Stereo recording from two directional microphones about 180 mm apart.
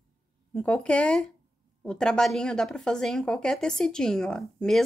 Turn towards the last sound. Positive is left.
turn(degrees=5)  # may be behind; listen again after turning